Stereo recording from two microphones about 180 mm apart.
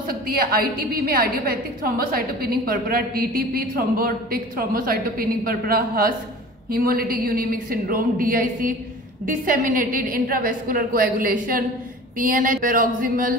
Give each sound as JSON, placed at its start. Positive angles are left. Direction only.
{"t": 0.0, "sound": "a woman's voice", "side_deg": -55}